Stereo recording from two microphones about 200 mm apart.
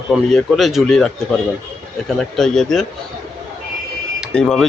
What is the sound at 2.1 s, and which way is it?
Speech, centre (ahead or behind).